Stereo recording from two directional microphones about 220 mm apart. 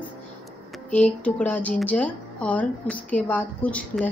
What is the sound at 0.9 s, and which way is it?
Speech, 5° left (ahead or behind).